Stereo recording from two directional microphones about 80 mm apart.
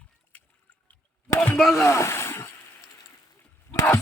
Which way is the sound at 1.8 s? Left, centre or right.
Left.